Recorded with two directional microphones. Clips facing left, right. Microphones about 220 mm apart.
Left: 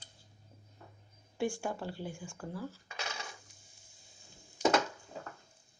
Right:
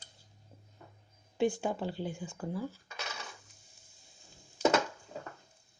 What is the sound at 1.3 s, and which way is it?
Speech, 20° right (ahead or behind).